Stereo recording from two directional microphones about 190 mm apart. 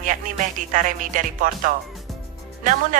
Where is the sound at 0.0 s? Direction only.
45° right (ahead or behind).